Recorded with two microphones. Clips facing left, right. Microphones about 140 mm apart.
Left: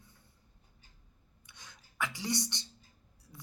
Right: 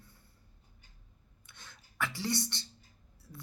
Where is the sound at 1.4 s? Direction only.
15° left (ahead or behind).